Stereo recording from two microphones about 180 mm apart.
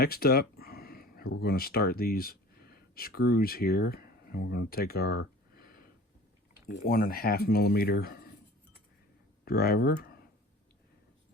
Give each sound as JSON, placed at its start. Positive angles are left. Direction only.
{"t": 0.0, "sound": "speech", "side_deg": 60}
{"t": 6.8, "sound": "speech", "side_deg": 55}
{"t": 9.4, "sound": "speech", "side_deg": 60}